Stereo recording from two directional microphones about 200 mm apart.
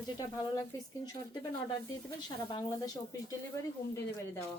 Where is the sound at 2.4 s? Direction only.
20° left (ahead or behind).